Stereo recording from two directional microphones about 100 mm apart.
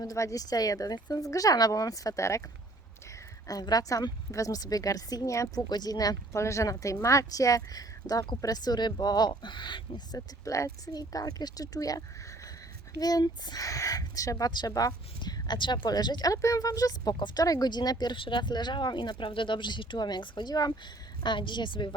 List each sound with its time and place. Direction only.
0.0 s speech: 35° left (ahead or behind)
3.4 s speech: 40° left (ahead or behind)
10.2 s speech: 30° left (ahead or behind); by 21.8 s 50° left (ahead or behind)